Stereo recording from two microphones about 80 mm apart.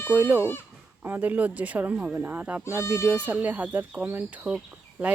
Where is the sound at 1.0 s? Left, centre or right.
Right.